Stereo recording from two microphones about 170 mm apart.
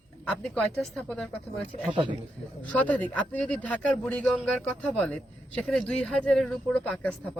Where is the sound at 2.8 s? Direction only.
10° left (ahead or behind).